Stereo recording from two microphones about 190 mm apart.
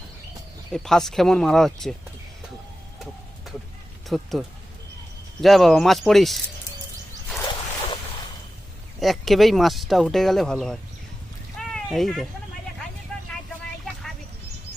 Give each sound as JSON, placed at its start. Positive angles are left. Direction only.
{"t": 0.7, "sound": "speech", "side_deg": 5}
{"t": 4.1, "sound": "speech", "side_deg": 0}
{"t": 9.0, "sound": "speech", "side_deg": 0}